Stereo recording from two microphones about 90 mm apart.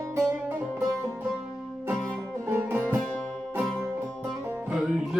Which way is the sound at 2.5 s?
25° right (ahead or behind).